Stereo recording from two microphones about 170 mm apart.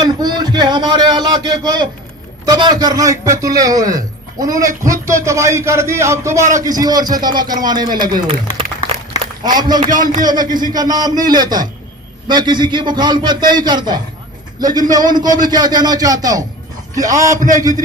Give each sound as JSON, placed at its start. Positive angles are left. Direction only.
{"t": 0.0, "sound": "a sound", "side_deg": -25}
{"t": 2.5, "sound": "a man's voice", "side_deg": -25}
{"t": 9.4, "sound": "a man's voice", "side_deg": -25}
{"t": 9.9, "sound": "speech", "side_deg": -50}
{"t": 10.2, "sound": "a man's voice", "side_deg": -25}